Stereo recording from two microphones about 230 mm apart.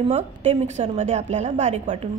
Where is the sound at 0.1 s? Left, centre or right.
Right.